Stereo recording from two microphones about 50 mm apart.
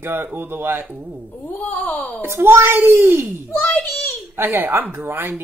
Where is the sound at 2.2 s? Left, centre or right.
Right.